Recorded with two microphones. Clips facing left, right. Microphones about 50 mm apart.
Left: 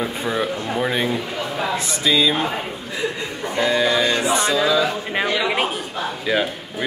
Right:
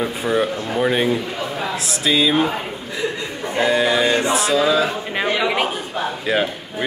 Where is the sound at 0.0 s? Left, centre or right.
Centre.